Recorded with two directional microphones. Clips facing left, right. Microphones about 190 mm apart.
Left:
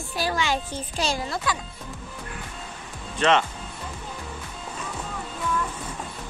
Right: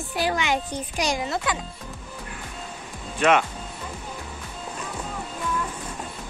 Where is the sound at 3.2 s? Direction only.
10° right (ahead or behind).